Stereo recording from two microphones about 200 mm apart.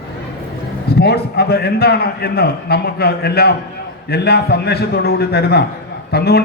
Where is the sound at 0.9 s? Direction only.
55° left (ahead or behind).